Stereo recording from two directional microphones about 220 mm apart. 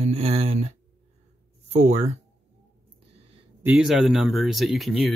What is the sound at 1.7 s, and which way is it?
Speech, 30° right (ahead or behind).